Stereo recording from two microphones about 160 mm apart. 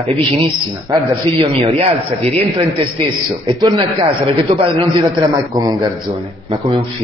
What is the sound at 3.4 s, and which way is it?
A man's voice, 30° right (ahead or behind).